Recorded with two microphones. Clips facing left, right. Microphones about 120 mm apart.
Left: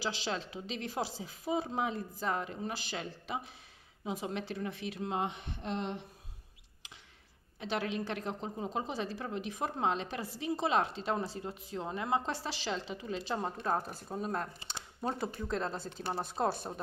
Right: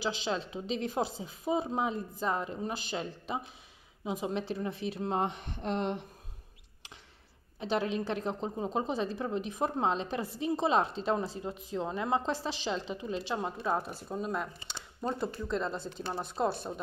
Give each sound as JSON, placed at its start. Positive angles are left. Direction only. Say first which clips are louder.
{"t": 0.0, "sound": "a woman's voice", "louder": "right 3 dB", "side_deg": -25}
{"t": 7.6, "sound": "a woman's voice", "louder": "right 4 dB", "side_deg": -30}
{"t": 16.4, "sound": "speech", "louder": "right 2 dB", "side_deg": 0}